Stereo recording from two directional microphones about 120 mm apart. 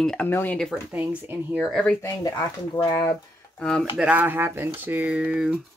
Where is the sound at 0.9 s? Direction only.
15° right (ahead or behind).